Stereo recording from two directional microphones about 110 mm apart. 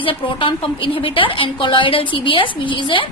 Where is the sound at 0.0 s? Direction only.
50° left (ahead or behind).